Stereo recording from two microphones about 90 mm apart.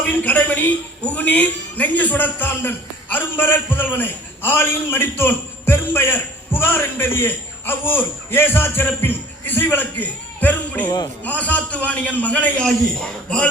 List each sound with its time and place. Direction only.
0.2 s a man's voice: 20° left (ahead or behind)